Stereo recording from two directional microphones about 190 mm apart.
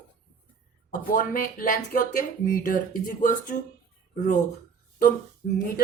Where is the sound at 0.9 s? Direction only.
45° left (ahead or behind).